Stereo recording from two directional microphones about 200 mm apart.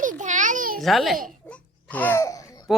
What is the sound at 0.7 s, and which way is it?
Speech, centre (ahead or behind).